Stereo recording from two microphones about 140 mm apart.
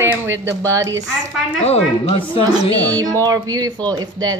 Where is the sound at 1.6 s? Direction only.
50° left (ahead or behind).